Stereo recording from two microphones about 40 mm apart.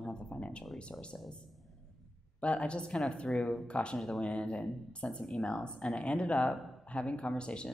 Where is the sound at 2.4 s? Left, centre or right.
Left.